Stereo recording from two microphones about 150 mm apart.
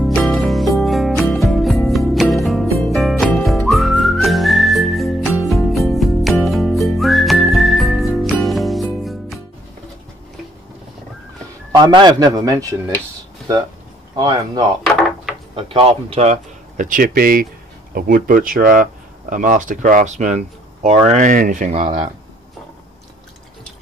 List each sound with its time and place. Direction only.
0.0 s music: 5° left (ahead or behind)
2.8 s whistling: centre (ahead or behind)
11.7 s a man's voice: 30° right (ahead or behind)
14.1 s a man's voice: 30° right (ahead or behind)
15.0 s wood: centre (ahead or behind)
15.5 s speech: 40° right (ahead or behind)
21.1 s speech: 60° right (ahead or behind)